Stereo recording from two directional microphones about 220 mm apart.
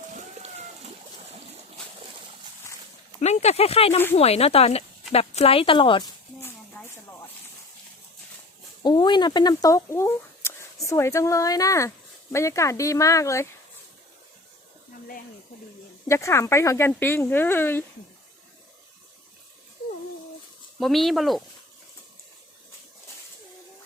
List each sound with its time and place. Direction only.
0.1 s splash: 35° right (ahead or behind)
3.2 s speech: 30° left (ahead or behind)
8.8 s speech: 20° left (ahead or behind)
16.0 s speech: 10° left (ahead or behind)
20.7 s speech: centre (ahead or behind)